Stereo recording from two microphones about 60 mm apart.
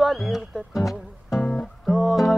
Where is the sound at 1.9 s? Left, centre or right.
Centre.